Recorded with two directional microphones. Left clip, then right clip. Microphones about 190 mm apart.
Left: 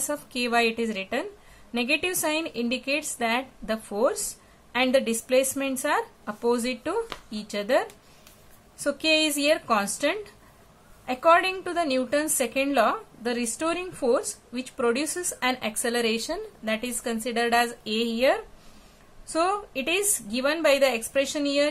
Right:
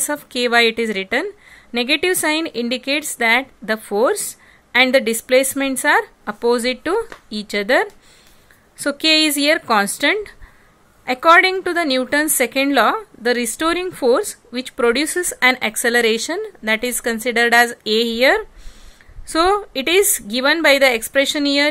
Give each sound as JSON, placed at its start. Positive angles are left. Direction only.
{"t": 0.0, "sound": "a woman's voice", "side_deg": -40}